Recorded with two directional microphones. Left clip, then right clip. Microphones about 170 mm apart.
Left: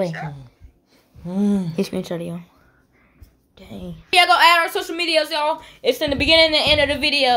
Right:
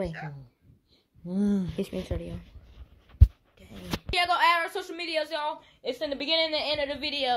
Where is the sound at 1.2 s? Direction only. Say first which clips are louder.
Left 7 dB; 40° right (ahead or behind).